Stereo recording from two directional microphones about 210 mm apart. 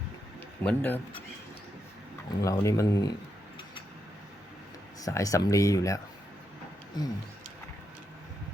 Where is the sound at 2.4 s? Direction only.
15° left (ahead or behind).